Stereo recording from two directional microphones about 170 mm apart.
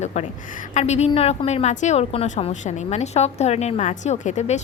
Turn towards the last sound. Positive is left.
turn(degrees=40)  # may be behind; listen again after turning